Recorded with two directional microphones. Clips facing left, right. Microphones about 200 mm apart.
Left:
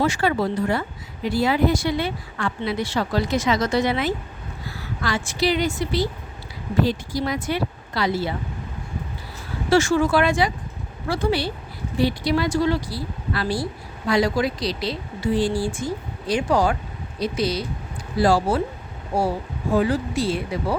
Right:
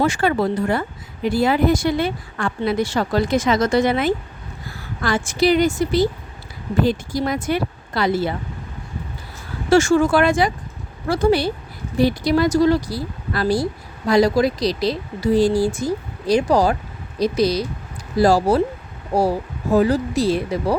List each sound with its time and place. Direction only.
0.0 s speech: 50° right (ahead or behind)
9.6 s speech: 45° right (ahead or behind)